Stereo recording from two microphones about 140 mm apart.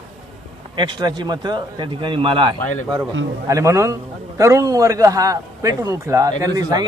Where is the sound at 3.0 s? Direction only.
20° right (ahead or behind).